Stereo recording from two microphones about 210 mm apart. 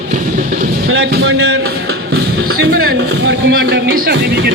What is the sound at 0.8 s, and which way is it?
Speech, 70° right (ahead or behind).